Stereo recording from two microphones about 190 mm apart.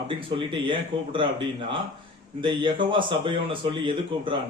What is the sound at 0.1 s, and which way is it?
A man's voice, 25° right (ahead or behind).